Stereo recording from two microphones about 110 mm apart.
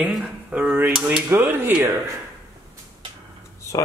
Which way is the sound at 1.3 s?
20° right (ahead or behind).